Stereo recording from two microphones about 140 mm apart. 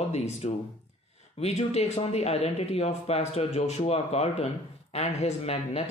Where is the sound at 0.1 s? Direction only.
50° left (ahead or behind).